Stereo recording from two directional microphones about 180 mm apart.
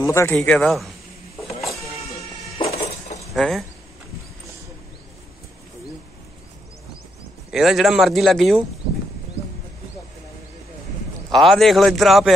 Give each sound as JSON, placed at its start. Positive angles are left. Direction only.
{"t": 0.0, "sound": "a man's voice", "side_deg": 15}
{"t": 1.6, "sound": "a sound", "side_deg": 0}
{"t": 2.6, "sound": "a sound", "side_deg": 35}
{"t": 3.3, "sound": "speech", "side_deg": 0}
{"t": 7.5, "sound": "speech", "side_deg": 0}
{"t": 11.3, "sound": "speech", "side_deg": 0}